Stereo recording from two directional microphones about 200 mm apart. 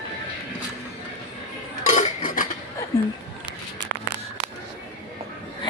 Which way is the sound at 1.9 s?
40° left (ahead or behind).